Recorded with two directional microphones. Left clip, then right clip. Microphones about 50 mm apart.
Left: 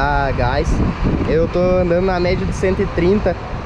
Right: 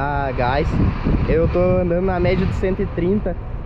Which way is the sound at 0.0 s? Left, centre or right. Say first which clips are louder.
Left 3 dB; centre.